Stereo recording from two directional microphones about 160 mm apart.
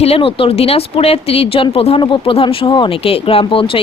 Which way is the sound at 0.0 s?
35° left (ahead or behind).